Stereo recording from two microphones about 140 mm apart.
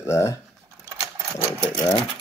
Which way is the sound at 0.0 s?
20° left (ahead or behind).